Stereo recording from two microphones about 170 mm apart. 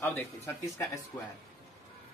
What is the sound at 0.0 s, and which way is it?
Speech, 10° left (ahead or behind).